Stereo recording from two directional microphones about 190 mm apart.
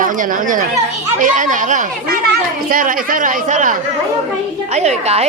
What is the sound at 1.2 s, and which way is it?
Music, 40° right (ahead or behind).